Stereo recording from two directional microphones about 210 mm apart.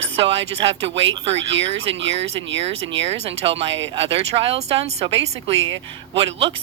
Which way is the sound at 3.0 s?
30° right (ahead or behind).